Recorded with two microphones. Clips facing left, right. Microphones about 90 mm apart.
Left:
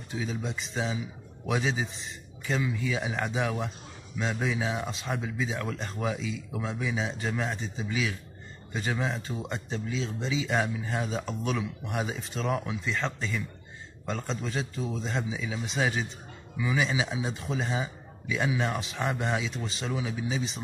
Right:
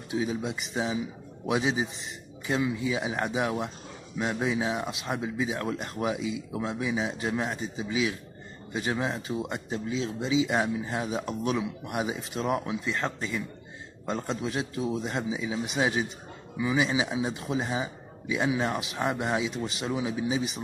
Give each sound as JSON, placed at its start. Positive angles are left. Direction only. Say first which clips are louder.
{"t": 0.1, "sound": "a man's voice", "louder": "right 4 dB", "side_deg": -10}